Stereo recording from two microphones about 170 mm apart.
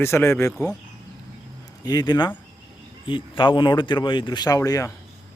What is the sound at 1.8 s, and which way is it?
Speech, 25° left (ahead or behind).